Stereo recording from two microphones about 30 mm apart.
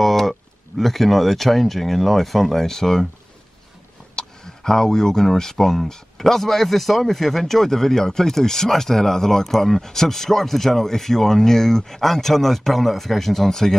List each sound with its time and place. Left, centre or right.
0.0 s speech: centre
4.1 s a sound: centre
5.4 s speech: centre
9.4 s speech: centre
9.8 s speech: centre